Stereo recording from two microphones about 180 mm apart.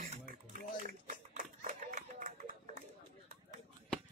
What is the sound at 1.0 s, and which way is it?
Run, 45° right (ahead or behind).